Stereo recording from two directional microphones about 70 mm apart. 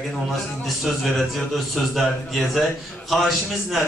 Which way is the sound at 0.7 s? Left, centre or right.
Centre.